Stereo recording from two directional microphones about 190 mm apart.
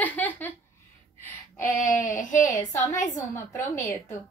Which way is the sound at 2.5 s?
15° left (ahead or behind).